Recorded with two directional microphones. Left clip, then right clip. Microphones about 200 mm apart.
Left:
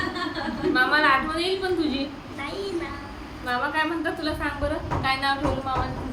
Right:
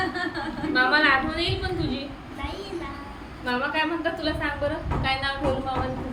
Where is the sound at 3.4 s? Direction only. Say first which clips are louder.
Even; 25° left (ahead or behind).